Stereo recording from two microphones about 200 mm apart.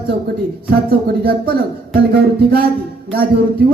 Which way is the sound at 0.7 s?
50° right (ahead or behind).